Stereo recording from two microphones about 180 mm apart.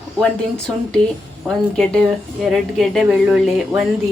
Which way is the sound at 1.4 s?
5° left (ahead or behind).